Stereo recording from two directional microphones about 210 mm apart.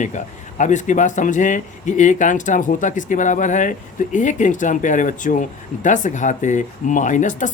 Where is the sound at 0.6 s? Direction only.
35° left (ahead or behind).